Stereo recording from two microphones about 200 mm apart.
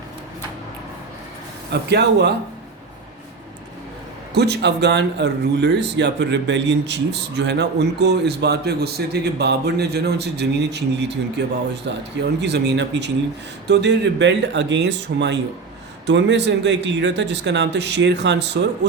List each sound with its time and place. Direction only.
1.7 s speech: 55° right (ahead or behind)
4.4 s speech: 55° right (ahead or behind)